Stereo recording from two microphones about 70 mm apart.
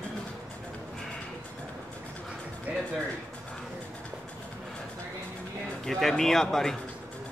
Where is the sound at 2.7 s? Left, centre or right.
Right.